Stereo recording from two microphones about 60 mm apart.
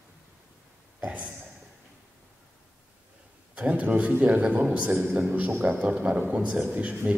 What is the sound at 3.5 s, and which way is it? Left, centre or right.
A man's voice, right.